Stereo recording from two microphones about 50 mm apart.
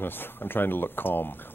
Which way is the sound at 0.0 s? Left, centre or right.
Left.